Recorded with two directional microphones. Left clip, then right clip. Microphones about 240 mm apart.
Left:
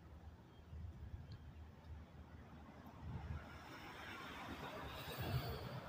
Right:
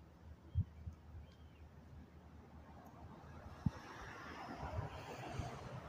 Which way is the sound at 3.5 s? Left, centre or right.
Left.